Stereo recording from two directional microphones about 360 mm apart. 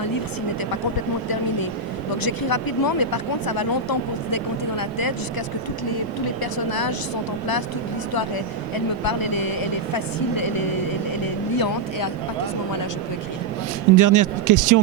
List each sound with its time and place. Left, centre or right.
2.2 s speech: left
6.4 s speech: left
8.7 s speech: left
13.9 s speech: right